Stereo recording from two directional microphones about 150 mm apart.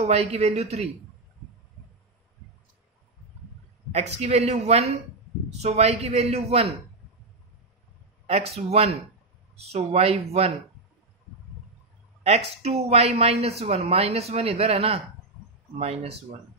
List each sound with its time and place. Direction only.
0.0 s a woman's voice: 45° right (ahead or behind)
3.9 s a woman's voice: 45° right (ahead or behind)
8.3 s a woman's voice: 45° right (ahead or behind)
12.2 s a woman's voice: 45° right (ahead or behind)